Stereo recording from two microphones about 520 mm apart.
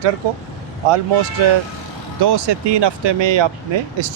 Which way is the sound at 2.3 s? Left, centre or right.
Right.